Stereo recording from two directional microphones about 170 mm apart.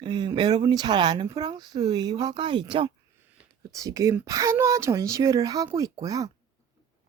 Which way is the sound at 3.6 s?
20° right (ahead or behind).